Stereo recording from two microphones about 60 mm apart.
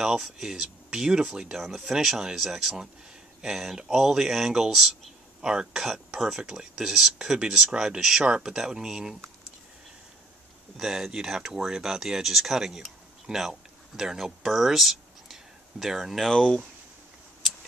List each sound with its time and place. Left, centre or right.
0.0 s speech: centre
10.8 s speech: centre
16.3 s speech: centre